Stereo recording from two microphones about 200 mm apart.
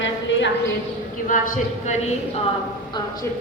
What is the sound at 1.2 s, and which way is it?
Speech, 40° left (ahead or behind).